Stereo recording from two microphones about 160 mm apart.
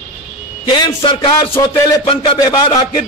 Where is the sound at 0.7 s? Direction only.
30° left (ahead or behind).